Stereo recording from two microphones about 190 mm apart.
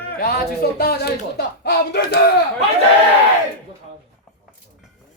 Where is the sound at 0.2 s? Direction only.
55° left (ahead or behind).